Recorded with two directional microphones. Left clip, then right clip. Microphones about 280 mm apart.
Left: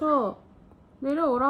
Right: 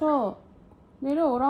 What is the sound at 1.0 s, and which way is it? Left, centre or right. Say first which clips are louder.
Speech: even; centre.